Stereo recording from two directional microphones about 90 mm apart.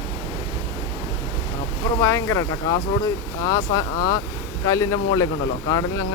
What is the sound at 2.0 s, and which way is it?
Speech, 30° left (ahead or behind).